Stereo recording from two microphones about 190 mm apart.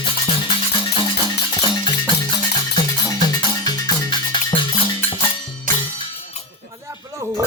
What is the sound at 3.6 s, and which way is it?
Music, 20° left (ahead or behind).